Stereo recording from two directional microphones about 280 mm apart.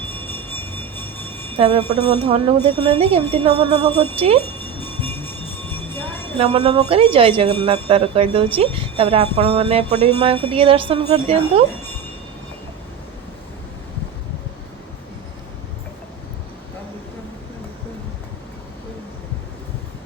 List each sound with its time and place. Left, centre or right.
0.0 s music: centre
1.5 s speech: right
4.4 s music: centre
6.3 s speech: right